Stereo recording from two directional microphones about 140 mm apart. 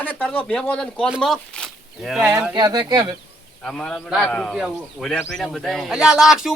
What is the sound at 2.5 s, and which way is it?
Speech, 30° right (ahead or behind).